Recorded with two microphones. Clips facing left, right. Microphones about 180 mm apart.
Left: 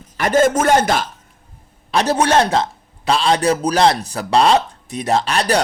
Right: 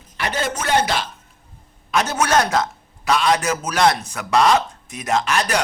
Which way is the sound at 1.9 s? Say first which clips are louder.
Left 4 dB; 30° left (ahead or behind).